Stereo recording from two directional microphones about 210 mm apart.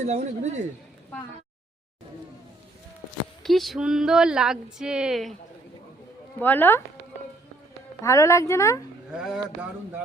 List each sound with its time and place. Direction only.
0.1 s speech: 35° right (ahead or behind)
3.4 s speech: centre (ahead or behind)
6.4 s speech: 10° left (ahead or behind)
8.0 s speech: 15° left (ahead or behind)
9.1 s speech: 5° right (ahead or behind)